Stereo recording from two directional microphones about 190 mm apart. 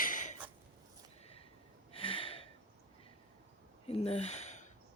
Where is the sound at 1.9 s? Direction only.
30° left (ahead or behind).